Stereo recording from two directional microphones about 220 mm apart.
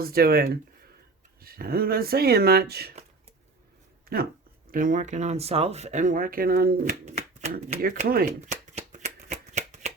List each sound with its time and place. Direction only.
0.0 s speech: 45° right (ahead or behind)
4.7 s speech: 40° right (ahead or behind)
7.0 s speech: 30° right (ahead or behind)
7.8 s speech: 40° right (ahead or behind)
8.7 s shuffling cards: 30° right (ahead or behind)